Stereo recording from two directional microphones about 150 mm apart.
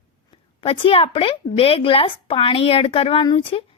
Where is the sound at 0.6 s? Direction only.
40° left (ahead or behind).